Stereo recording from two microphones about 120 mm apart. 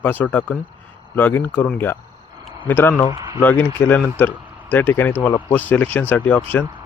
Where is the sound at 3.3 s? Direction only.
15° left (ahead or behind).